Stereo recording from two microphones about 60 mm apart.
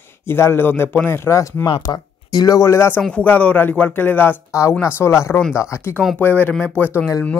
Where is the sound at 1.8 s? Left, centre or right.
Left.